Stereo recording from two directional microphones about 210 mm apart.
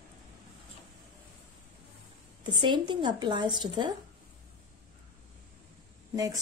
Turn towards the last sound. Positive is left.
turn(degrees=-15)  # may be behind; listen again after turning